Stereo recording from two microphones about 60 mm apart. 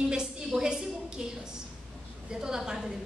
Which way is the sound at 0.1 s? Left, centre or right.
Centre.